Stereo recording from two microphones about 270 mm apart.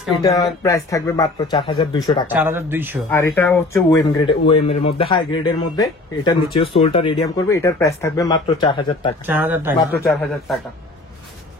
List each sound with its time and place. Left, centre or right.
0.2 s speech: centre
2.2 s speech: centre
3.1 s speech: centre
9.3 s a man's voice: centre